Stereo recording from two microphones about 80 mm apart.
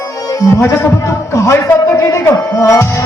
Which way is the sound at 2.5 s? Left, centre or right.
Left.